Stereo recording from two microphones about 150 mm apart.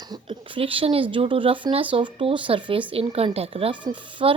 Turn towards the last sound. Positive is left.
turn(degrees=-35)  # may be behind; listen again after turning